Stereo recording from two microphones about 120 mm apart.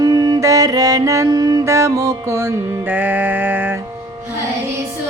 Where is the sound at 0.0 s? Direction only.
30° right (ahead or behind); by 3.8 s 15° right (ahead or behind).